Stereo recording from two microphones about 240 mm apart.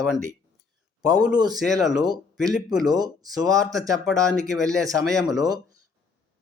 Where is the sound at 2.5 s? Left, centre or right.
Centre.